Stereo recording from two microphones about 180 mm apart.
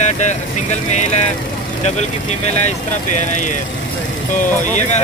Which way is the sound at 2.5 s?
40° left (ahead or behind).